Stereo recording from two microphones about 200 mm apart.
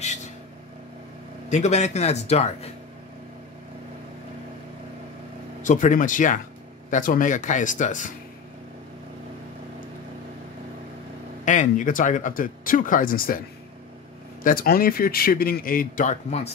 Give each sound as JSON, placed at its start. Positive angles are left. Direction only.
{"t": 1.5, "sound": "speech", "side_deg": 35}
{"t": 5.6, "sound": "speech", "side_deg": 40}
{"t": 11.4, "sound": "speech", "side_deg": 40}
{"t": 14.4, "sound": "a man's voice", "side_deg": 45}